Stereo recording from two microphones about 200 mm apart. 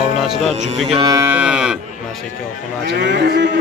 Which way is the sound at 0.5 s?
30° right (ahead or behind).